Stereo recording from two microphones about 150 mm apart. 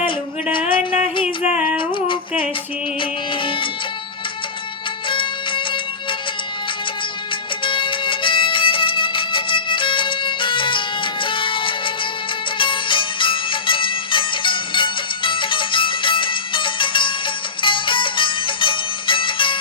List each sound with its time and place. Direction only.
0.5 s music: 35° left (ahead or behind)
5.0 s music: 35° left (ahead or behind)
7.6 s music: 35° left (ahead or behind)